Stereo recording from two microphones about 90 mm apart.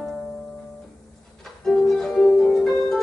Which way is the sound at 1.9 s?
5° left (ahead or behind).